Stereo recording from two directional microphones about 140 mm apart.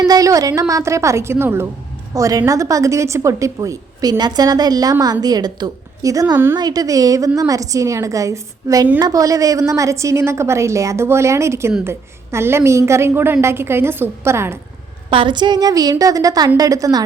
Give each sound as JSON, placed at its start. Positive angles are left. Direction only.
{"t": 0.0, "sound": "a woman's voice", "side_deg": -25}
{"t": 15.1, "sound": "a woman's voice", "side_deg": -35}